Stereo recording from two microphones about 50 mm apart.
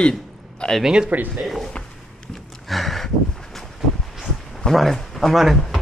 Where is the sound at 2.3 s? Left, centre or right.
Centre.